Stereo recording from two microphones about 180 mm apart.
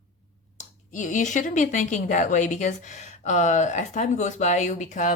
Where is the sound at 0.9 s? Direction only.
45° left (ahead or behind).